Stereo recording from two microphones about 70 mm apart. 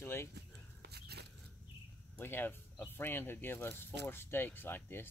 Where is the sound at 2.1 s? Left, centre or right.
Left.